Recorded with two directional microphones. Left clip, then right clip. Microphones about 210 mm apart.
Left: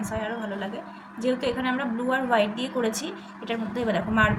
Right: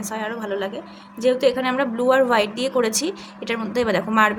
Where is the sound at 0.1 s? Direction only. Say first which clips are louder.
Right 6 dB; 50° right (ahead or behind).